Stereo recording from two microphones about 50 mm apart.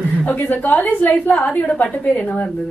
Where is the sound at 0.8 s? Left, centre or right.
Left.